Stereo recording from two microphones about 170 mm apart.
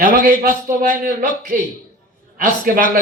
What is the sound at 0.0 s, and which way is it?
A man's voice, 55° right (ahead or behind).